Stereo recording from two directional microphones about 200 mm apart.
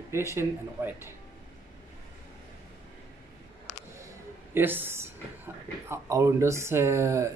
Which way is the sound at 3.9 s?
15° right (ahead or behind).